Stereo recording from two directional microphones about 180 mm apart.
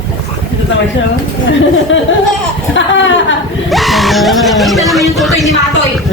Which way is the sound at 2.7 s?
90° left.